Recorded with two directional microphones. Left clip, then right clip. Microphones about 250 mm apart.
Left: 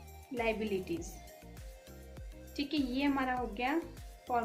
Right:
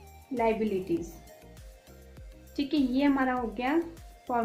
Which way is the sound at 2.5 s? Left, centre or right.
Right.